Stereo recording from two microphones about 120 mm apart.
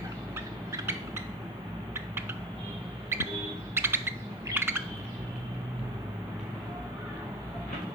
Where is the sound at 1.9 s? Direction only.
20° right (ahead or behind).